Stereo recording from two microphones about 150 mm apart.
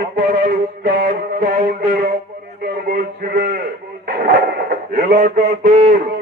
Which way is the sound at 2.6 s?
90° right.